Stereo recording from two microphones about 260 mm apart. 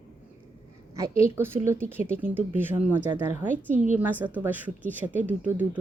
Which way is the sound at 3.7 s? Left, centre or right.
Right.